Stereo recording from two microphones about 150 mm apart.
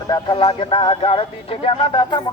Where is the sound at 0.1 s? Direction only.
35° left (ahead or behind).